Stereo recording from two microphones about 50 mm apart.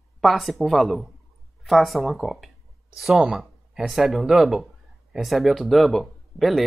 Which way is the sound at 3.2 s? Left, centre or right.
Centre.